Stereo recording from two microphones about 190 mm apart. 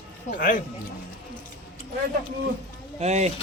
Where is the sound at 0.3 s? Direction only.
45° left (ahead or behind).